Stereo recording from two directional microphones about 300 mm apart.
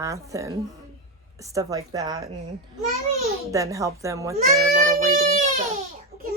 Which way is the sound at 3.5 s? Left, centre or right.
Centre.